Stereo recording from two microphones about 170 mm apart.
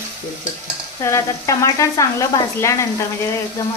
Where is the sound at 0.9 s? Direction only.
20° left (ahead or behind).